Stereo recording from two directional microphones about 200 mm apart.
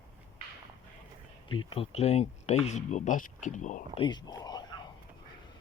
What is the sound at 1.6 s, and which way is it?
Speech, 30° left (ahead or behind).